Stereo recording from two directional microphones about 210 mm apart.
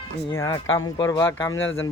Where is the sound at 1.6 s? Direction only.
65° left (ahead or behind).